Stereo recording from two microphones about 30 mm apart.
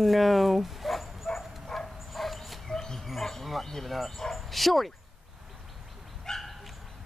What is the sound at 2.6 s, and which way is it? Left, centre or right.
Bird, centre.